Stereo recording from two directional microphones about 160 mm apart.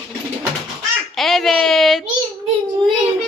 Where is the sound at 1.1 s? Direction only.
Centre (ahead or behind).